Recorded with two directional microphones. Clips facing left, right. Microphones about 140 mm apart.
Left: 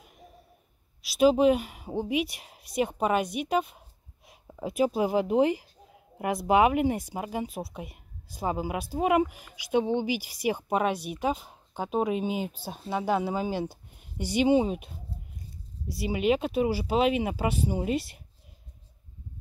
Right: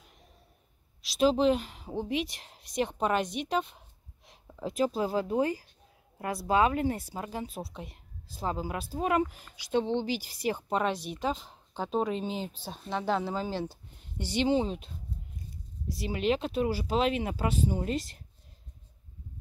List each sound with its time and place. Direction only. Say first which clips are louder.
1.0 s speech: left 4 dB; 10° left (ahead or behind)
15.9 s speech: left 3 dB; 10° left (ahead or behind)